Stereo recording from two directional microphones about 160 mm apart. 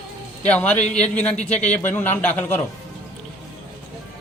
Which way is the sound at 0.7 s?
45° left (ahead or behind).